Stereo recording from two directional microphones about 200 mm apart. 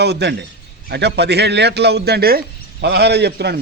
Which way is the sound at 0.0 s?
55° right (ahead or behind).